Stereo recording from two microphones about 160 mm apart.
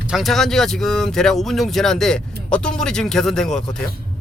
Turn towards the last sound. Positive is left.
turn(degrees=5)  # may be behind; listen again after turning